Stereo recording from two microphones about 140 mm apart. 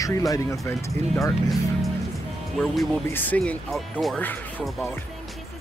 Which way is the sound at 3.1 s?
15° left (ahead or behind).